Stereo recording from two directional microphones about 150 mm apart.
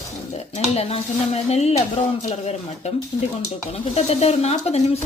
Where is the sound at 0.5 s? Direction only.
45° left (ahead or behind).